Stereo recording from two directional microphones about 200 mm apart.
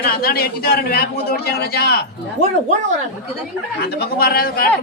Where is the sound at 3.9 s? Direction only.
50° left (ahead or behind).